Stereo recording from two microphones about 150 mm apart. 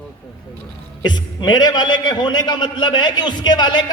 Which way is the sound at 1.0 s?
30° left (ahead or behind).